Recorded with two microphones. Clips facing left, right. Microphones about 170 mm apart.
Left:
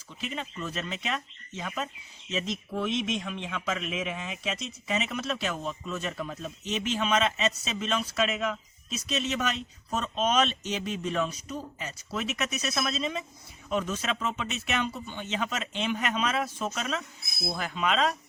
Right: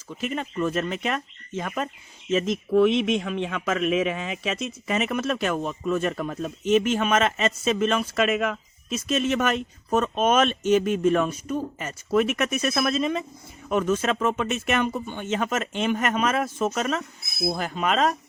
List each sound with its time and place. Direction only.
0.1 s a man's voice: 50° right (ahead or behind)